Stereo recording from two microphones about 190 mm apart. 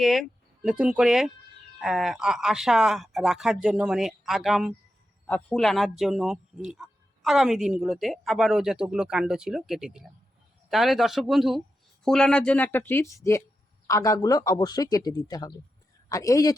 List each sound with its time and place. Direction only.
0.0 s a man's voice: centre (ahead or behind); by 16.6 s 20° left (ahead or behind)